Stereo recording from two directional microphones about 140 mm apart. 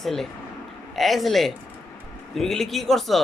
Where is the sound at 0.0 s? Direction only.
Centre (ahead or behind).